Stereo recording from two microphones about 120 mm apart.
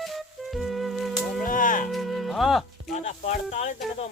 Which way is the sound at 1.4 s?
90° left.